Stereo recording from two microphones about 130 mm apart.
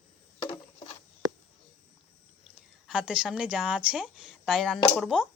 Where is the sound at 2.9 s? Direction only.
5° right (ahead or behind).